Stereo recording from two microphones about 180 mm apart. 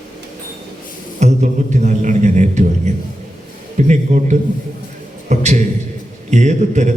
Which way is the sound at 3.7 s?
40° right (ahead or behind).